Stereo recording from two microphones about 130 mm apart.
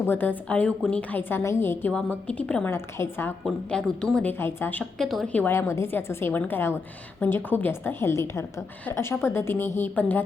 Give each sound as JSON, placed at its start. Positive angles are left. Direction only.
{"t": 0.0, "sound": "a woman's voice", "side_deg": 15}
{"t": 2.7, "sound": "a woman's voice", "side_deg": 20}
{"t": 3.4, "sound": "a woman's voice", "side_deg": 5}
{"t": 5.3, "sound": "a woman's voice", "side_deg": 15}